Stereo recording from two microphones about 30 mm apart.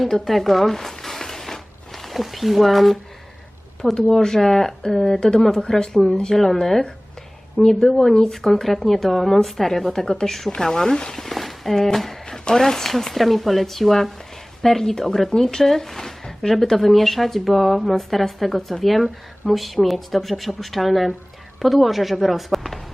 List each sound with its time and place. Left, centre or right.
0.3 s zipper: centre
2.1 s speech: centre
3.8 s speech: centre
4.4 s speech: centre
11.3 s a sound: centre
12.5 s speech: centre